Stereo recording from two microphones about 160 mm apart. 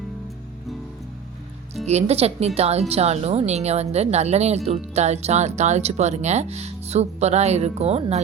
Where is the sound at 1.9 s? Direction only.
40° right (ahead or behind).